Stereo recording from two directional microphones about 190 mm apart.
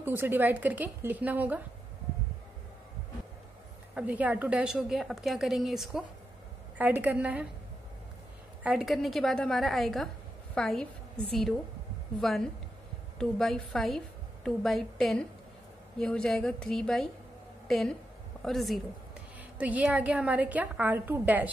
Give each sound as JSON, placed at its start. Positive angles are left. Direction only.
{"t": 0.0, "sound": "a woman's voice", "side_deg": -10}
{"t": 3.9, "sound": "a woman's voice", "side_deg": -5}
{"t": 8.6, "sound": "a woman's voice", "side_deg": 0}